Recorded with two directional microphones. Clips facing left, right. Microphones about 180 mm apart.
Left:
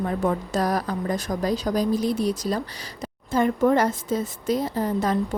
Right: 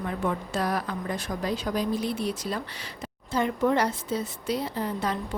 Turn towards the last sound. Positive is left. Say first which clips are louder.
# left 5 dB
turn(degrees=45)  # may be behind; listen again after turning